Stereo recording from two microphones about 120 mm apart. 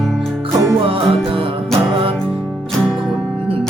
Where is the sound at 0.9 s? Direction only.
50° right (ahead or behind).